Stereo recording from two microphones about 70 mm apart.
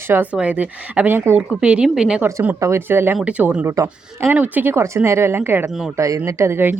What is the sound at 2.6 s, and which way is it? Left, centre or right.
Speech, right.